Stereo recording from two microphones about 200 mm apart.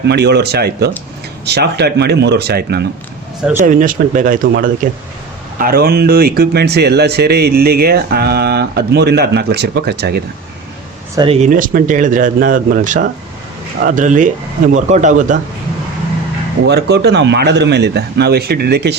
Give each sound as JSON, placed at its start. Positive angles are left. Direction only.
{"t": 0.0, "sound": "speech", "side_deg": -55}
{"t": 3.6, "sound": "speech", "side_deg": -40}
{"t": 11.1, "sound": "speech", "side_deg": -20}
{"t": 11.3, "sound": "speech", "side_deg": -40}
{"t": 16.6, "sound": "speech", "side_deg": -55}